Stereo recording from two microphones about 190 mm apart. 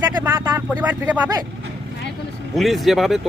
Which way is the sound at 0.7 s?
10° right (ahead or behind).